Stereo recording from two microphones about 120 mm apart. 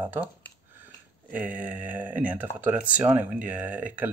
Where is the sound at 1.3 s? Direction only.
15° right (ahead or behind).